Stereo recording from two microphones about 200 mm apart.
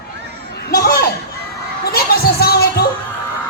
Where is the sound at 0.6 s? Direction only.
50° left (ahead or behind).